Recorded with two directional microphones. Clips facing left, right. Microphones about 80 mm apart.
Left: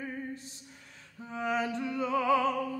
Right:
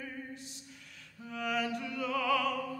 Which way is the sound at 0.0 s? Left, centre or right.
Left.